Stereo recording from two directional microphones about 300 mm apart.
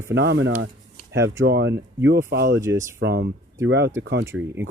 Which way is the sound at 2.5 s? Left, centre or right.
Centre.